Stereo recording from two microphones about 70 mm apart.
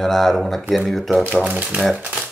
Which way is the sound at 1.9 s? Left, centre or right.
Centre.